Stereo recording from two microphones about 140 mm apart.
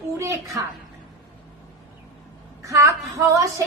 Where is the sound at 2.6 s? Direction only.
20° right (ahead or behind).